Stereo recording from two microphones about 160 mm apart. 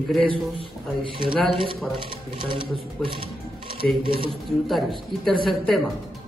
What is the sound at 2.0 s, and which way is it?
Speech, 30° right (ahead or behind).